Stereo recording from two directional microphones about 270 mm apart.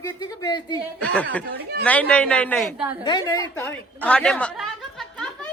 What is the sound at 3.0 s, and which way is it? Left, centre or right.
A woman's voice, centre.